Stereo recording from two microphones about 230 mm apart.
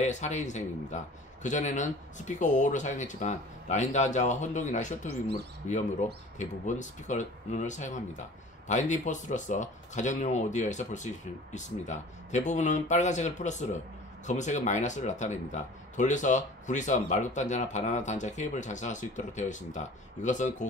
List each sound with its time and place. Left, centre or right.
0.0 s speech: left